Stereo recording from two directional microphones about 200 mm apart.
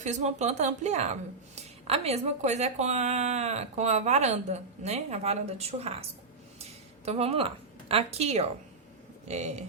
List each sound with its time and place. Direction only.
0.0 s a woman's voice: 35° right (ahead or behind)